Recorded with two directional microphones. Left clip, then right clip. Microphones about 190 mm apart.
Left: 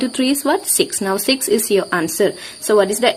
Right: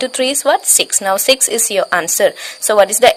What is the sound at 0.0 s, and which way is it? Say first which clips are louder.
Speech: right 4 dB; 35° right (ahead or behind).